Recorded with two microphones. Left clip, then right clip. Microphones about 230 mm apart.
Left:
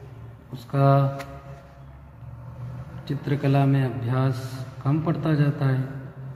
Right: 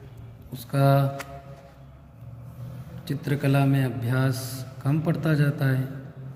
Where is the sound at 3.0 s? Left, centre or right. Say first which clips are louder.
Left 1 dB; right.